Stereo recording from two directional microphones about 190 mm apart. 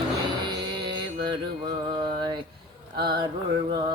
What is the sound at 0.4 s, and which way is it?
Music, 25° right (ahead or behind).